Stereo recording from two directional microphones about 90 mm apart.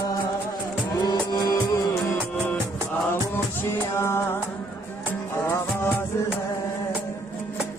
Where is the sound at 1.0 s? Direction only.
50° left (ahead or behind).